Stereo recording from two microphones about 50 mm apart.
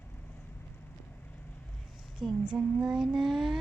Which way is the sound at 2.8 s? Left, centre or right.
Centre.